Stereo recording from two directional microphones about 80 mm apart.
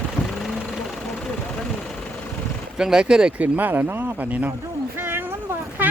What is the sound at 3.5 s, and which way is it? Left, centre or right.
Speech, right.